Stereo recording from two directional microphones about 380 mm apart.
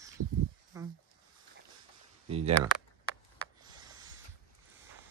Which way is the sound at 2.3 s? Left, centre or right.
Centre.